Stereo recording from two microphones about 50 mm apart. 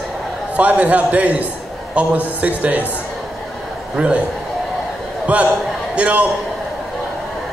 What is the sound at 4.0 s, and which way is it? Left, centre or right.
Speech, right.